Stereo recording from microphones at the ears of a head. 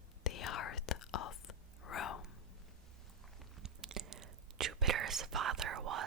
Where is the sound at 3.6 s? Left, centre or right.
Right.